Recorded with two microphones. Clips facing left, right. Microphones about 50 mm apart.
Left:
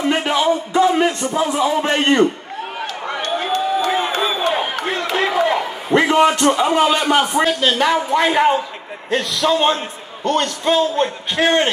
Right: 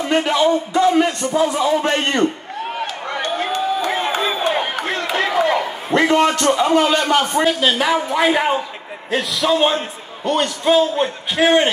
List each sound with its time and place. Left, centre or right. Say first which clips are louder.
0.1 s a man's voice: right 3 dB; centre
3.2 s crowd: left 1 dB; centre
5.0 s a sound: even; centre
5.9 s a man's voice: left 1 dB; centre
7.6 s a man's voice: left 1 dB; centre